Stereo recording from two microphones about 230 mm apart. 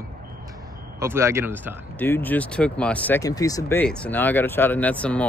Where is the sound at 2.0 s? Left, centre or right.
Centre.